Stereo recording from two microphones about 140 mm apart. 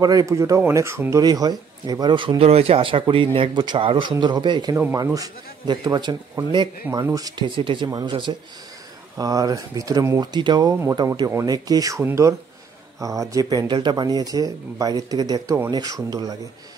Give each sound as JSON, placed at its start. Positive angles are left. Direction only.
{"t": 0.0, "sound": "speech", "side_deg": -25}